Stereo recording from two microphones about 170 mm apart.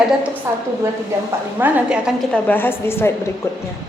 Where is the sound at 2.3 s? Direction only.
10° left (ahead or behind).